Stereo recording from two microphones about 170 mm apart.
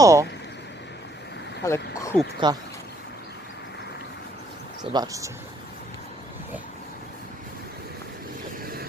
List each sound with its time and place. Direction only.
0.0 s speech: 20° right (ahead or behind)
1.6 s speech: 15° left (ahead or behind)
2.4 s speech: 25° right (ahead or behind)
4.8 s speech: 25° right (ahead or behind)